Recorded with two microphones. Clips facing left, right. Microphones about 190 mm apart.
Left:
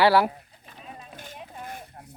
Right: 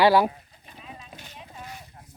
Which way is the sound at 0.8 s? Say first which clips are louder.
Left 2 dB; 50° left (ahead or behind).